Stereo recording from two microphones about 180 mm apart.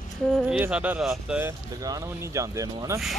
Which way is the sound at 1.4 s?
20° right (ahead or behind).